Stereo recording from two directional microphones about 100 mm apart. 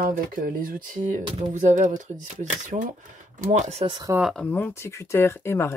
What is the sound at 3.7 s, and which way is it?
Speech, 90° right.